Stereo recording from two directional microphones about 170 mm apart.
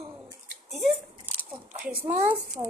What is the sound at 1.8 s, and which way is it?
Speech, 10° right (ahead or behind).